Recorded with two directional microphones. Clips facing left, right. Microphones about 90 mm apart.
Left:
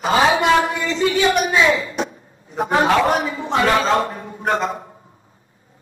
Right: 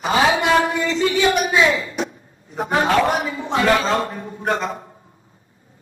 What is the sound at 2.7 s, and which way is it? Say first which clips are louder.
A man's voice: left 1 dB; 30° left (ahead or behind).